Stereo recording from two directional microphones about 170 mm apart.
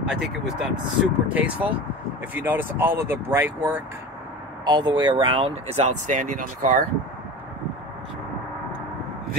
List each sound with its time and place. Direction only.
0.0 s speech: 5° right (ahead or behind)
4.6 s speech: 25° right (ahead or behind); by 6.8 s 50° right (ahead or behind)